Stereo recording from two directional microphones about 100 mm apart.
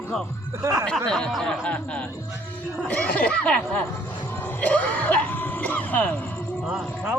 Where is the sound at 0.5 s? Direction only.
30° right (ahead or behind).